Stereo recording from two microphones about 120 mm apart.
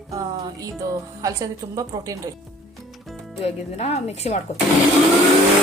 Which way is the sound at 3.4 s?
60° left (ahead or behind).